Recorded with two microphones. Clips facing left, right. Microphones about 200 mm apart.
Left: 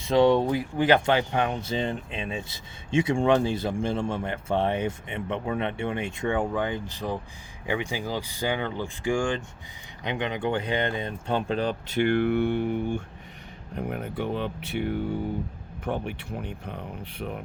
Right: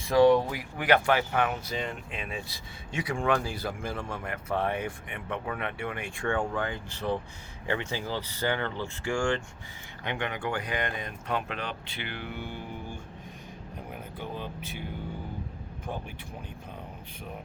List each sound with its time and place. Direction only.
0.0 s speech: 25° left (ahead or behind); by 17.4 s 65° left (ahead or behind)